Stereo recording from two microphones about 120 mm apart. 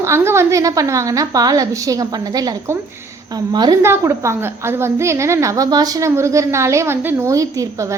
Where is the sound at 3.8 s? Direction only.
20° right (ahead or behind).